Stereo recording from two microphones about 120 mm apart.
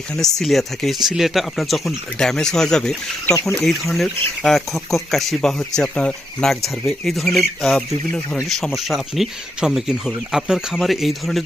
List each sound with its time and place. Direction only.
0.2 s speech: 5° left (ahead or behind)